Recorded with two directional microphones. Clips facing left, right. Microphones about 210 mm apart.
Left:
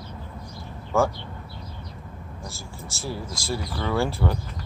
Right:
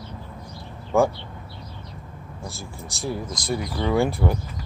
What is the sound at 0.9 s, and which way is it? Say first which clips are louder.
Speech: right 3 dB; 15° right (ahead or behind).